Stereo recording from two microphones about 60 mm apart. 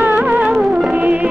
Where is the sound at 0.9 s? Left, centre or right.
Right.